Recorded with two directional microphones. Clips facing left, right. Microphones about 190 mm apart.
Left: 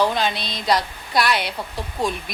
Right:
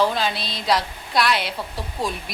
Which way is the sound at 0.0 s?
Centre (ahead or behind).